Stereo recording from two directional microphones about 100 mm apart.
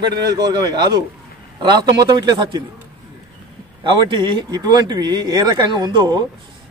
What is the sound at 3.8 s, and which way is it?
Speech, 55° right (ahead or behind).